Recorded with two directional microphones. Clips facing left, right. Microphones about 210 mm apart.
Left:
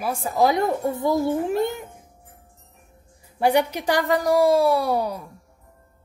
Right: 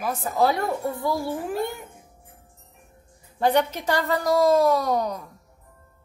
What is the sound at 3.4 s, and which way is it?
A child's voice, 10° left (ahead or behind).